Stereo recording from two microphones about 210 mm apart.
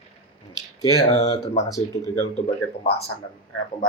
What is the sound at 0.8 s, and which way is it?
Speech, 15° left (ahead or behind).